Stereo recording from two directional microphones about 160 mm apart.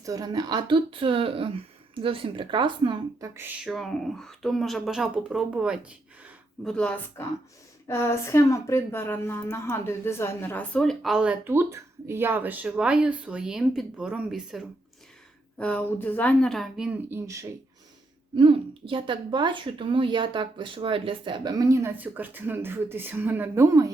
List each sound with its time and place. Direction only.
0.0 s speech: 20° right (ahead or behind)
3.6 s a woman's voice: centre (ahead or behind)
6.7 s a woman's voice: 5° left (ahead or behind)
15.5 s a woman's voice: 10° left (ahead or behind)
17.1 s a woman's voice: 15° right (ahead or behind)
18.3 s a woman's voice: 30° right (ahead or behind)